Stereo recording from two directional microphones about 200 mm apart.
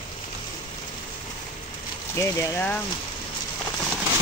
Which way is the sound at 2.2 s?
15° left (ahead or behind).